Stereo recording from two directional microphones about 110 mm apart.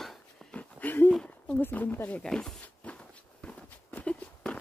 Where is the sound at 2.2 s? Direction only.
5° left (ahead or behind).